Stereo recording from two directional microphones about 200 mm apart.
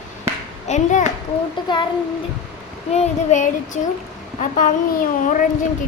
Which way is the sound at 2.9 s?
35° left (ahead or behind).